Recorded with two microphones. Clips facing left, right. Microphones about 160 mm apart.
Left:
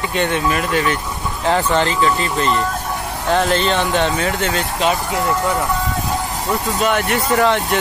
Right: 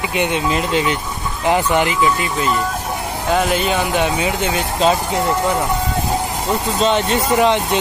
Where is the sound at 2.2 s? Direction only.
5° right (ahead or behind).